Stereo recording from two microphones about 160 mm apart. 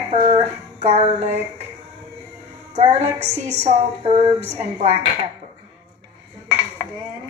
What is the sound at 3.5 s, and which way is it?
Speech, 45° right (ahead or behind).